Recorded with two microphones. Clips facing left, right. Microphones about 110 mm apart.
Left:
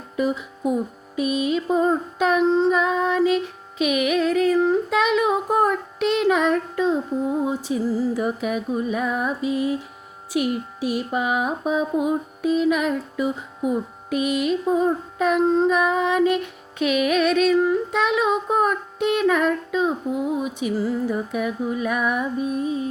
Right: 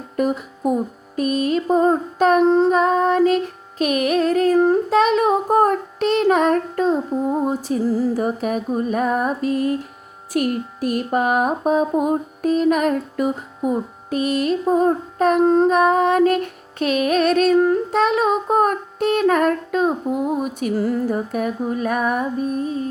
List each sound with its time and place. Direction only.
0.2 s music: 50° right (ahead or behind)
1.6 s child singing: 45° right (ahead or behind)
21.2 s child singing: 40° right (ahead or behind)